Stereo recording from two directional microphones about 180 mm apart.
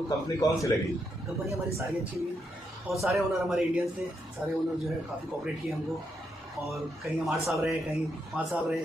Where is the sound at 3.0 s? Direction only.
Centre (ahead or behind).